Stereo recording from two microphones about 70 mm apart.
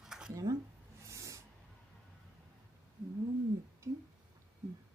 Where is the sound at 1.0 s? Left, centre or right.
Right.